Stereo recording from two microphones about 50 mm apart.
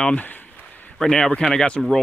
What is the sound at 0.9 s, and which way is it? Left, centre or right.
Speech, centre.